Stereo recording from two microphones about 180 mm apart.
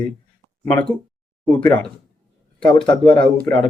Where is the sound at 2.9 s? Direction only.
25° left (ahead or behind).